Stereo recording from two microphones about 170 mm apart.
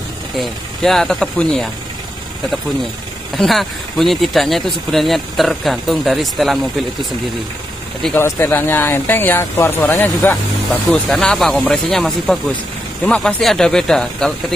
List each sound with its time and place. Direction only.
0.4 s speech: centre (ahead or behind)
3.3 s speech: centre (ahead or behind)
8.0 s speech: 10° left (ahead or behind)